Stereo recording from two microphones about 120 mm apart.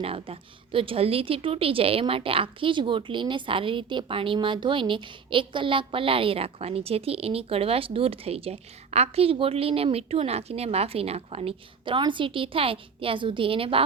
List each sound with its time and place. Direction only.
0.0 s a woman's voice: 50° right (ahead or behind)